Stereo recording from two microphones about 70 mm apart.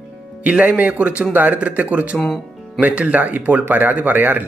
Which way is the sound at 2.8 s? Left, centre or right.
Centre.